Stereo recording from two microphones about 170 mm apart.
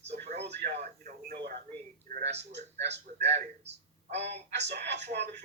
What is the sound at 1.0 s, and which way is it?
Radio, 55° right (ahead or behind).